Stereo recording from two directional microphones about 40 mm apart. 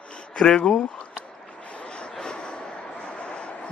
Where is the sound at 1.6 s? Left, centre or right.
Left.